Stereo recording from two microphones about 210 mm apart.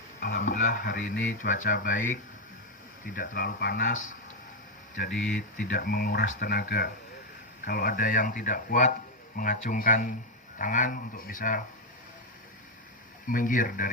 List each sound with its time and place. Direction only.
0.2 s speech: 45° left (ahead or behind)
13.2 s speech: 40° left (ahead or behind)